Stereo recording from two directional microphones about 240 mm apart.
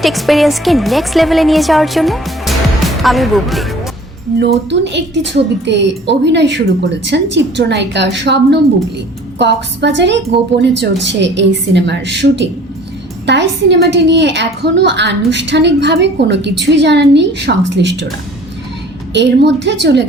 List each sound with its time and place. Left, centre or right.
0.0 s speech: centre
4.7 s a woman's voice: right
19.1 s a woman's voice: right